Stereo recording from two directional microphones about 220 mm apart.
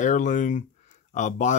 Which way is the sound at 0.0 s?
35° left (ahead or behind).